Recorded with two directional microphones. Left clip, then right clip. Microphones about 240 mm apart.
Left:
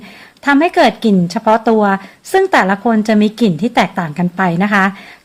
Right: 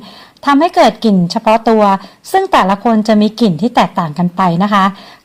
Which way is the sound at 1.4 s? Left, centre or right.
Right.